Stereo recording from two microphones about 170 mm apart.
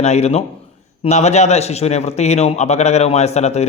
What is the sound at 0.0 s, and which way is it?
A man's voice, 40° left (ahead or behind).